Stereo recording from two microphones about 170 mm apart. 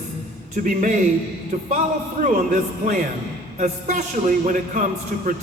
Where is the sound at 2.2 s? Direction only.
50° right (ahead or behind).